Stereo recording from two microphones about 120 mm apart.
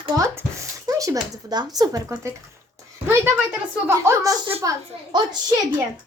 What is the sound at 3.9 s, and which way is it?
Speech, 20° right (ahead or behind).